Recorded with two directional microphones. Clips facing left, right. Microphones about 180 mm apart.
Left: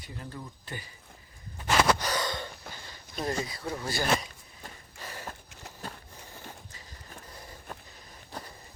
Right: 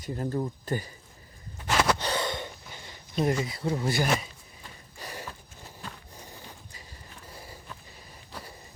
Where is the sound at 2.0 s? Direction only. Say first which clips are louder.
Right 2 dB; 25° right (ahead or behind).